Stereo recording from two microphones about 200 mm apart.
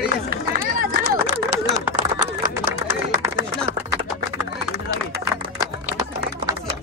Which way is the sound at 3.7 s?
45° right (ahead or behind).